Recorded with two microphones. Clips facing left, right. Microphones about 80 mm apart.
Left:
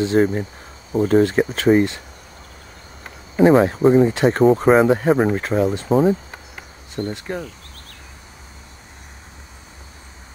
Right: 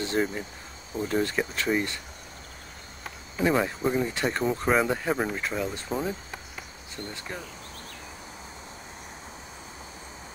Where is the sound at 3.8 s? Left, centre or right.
Left.